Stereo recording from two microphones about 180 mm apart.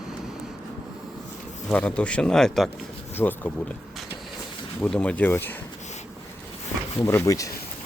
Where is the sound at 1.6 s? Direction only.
5° left (ahead or behind).